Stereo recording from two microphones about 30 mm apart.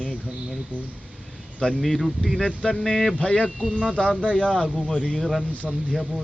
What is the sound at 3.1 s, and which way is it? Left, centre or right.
Speech, left.